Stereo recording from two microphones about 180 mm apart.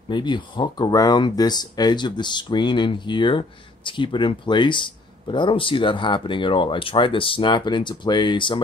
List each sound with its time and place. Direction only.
0.1 s speech: 25° left (ahead or behind)